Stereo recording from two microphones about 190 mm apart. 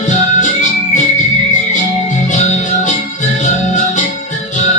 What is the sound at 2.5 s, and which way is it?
Music, 35° left (ahead or behind).